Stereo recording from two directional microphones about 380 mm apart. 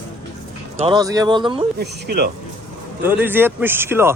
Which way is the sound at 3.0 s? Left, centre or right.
Centre.